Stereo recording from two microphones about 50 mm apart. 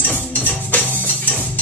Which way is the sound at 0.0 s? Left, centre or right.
Left.